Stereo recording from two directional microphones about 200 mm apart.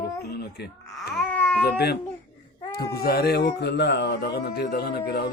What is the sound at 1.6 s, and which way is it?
Speech, 55° left (ahead or behind).